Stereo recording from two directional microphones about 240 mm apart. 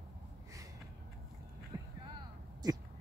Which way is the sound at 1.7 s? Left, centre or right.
Centre.